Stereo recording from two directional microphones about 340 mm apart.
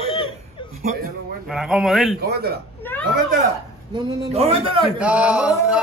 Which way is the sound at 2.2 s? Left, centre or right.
Right.